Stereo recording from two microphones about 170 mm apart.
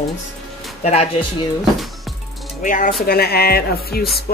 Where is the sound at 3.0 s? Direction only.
65° left (ahead or behind).